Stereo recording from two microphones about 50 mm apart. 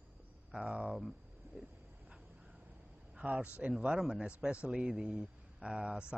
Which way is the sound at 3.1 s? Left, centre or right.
Right.